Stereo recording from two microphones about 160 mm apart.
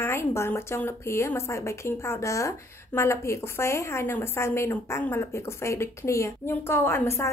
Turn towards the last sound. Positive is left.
turn(degrees=15)  # may be behind; listen again after turning